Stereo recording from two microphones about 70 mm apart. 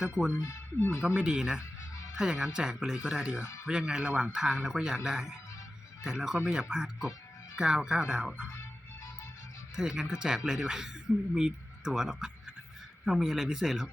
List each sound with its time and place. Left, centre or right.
0.8 s speech: left
1.0 s speech: centre
3.4 s speech: left
3.7 s speech: centre
9.7 s speech: centre